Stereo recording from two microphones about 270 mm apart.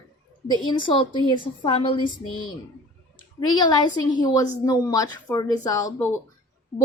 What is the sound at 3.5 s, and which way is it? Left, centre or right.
A woman's voice, centre.